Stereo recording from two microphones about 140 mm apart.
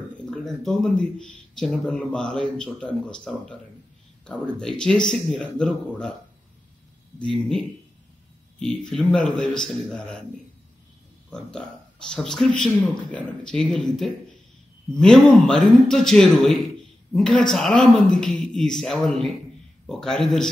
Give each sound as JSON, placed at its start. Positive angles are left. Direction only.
{"t": 0.3, "sound": "speech", "side_deg": 5}
{"t": 7.2, "sound": "speech", "side_deg": 5}
{"t": 11.2, "sound": "speech", "side_deg": 5}